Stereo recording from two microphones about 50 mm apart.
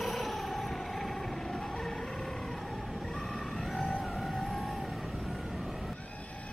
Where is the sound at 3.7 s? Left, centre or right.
Centre.